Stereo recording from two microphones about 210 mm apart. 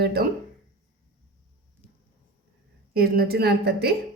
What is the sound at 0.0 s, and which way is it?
Speech, 50° right (ahead or behind).